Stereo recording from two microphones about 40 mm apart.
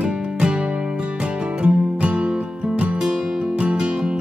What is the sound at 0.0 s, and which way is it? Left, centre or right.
Music, right.